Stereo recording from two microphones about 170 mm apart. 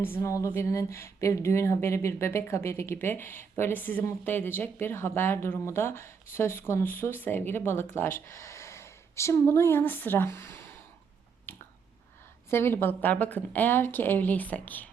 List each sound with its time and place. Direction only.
0.0 s speech: 15° left (ahead or behind)
11.5 s finger snapping: 15° left (ahead or behind)
12.5 s speech: 15° left (ahead or behind)